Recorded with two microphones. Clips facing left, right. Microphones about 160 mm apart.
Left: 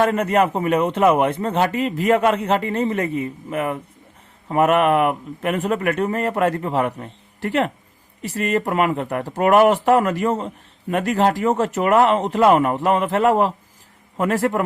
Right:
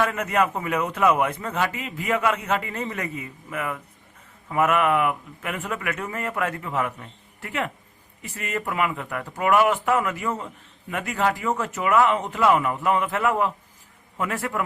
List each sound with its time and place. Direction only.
0.0 s a man's voice: 30° left (ahead or behind); by 12.7 s 50° left (ahead or behind)
12.7 s a man's voice: 40° left (ahead or behind)